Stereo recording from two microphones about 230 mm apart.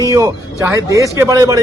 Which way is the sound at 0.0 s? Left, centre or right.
Centre.